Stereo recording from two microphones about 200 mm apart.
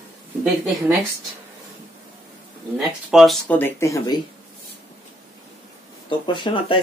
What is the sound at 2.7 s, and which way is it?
Speech, centre (ahead or behind).